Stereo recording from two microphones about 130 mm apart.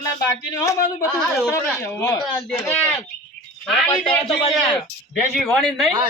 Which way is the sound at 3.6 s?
Centre (ahead or behind).